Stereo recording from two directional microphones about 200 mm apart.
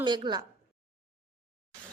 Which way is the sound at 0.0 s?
20° right (ahead or behind).